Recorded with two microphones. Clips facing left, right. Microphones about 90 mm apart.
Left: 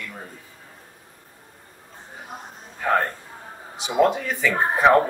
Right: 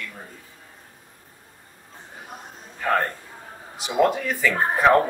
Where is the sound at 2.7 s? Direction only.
5° left (ahead or behind).